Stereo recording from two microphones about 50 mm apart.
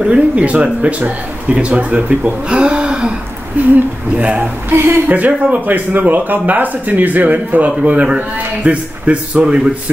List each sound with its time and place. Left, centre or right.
0.0 s speech: right
4.6 s a woman's voice: right
5.0 s speech: right